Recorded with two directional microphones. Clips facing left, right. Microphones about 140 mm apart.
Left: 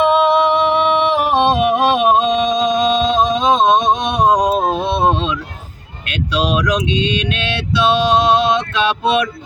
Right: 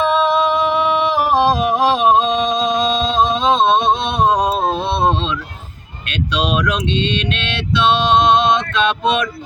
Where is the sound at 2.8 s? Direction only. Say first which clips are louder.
Left 2 dB; 15° left (ahead or behind).